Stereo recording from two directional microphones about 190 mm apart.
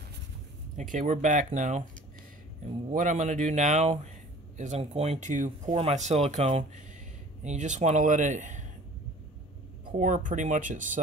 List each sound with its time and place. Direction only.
0.7 s speech: 40° right (ahead or behind)
2.9 s speech: 40° right (ahead or behind)
9.8 s speech: 40° right (ahead or behind)